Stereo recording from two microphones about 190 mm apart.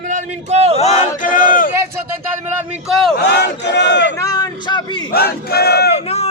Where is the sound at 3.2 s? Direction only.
60° left (ahead or behind).